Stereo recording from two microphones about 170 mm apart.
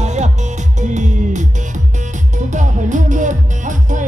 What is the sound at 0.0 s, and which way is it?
Music, 45° right (ahead or behind).